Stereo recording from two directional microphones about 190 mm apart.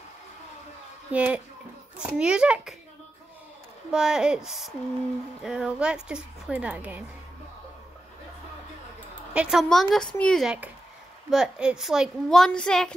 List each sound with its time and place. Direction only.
1.1 s a child's voice: 5° right (ahead or behind)
3.9 s a woman's voice: 5° right (ahead or behind)
9.3 s a woman's voice: 5° right (ahead or behind)